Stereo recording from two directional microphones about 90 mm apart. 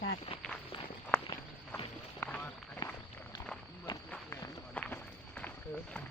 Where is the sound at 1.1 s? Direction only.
15° left (ahead or behind).